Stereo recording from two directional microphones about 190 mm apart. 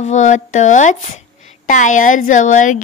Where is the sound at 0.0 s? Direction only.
40° left (ahead or behind).